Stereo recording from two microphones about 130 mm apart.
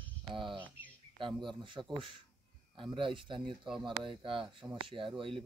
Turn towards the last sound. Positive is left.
turn(degrees=-40)  # may be behind; listen again after turning